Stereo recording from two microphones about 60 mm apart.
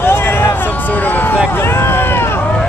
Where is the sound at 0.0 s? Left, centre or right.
Left.